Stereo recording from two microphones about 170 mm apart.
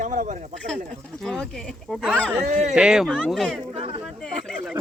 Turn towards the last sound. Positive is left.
turn(degrees=5)  # may be behind; listen again after turning